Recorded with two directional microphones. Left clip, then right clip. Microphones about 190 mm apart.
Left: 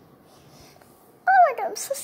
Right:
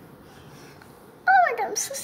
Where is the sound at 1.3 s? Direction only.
15° left (ahead or behind).